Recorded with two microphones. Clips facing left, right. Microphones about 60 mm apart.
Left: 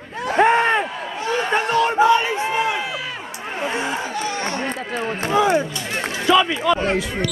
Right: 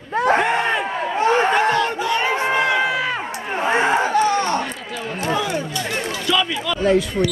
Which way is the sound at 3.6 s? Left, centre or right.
Right.